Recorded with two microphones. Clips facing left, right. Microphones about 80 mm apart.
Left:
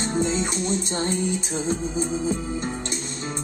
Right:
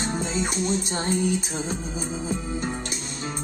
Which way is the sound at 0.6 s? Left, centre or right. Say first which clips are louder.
Left 1 dB; right.